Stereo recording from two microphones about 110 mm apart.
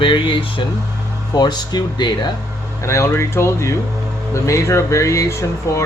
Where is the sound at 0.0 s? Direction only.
50° left (ahead or behind).